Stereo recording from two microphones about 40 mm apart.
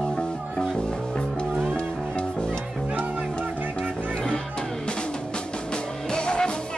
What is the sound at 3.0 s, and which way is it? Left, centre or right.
Music, right.